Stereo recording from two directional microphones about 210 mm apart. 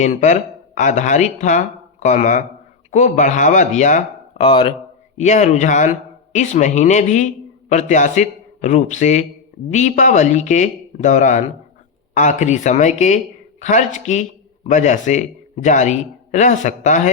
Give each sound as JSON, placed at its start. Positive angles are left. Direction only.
{"t": 0.0, "sound": "speech", "side_deg": 35}